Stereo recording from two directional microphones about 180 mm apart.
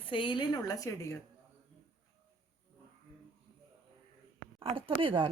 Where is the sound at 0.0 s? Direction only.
30° left (ahead or behind).